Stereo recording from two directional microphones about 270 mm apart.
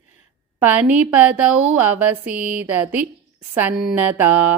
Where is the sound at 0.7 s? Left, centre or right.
Centre.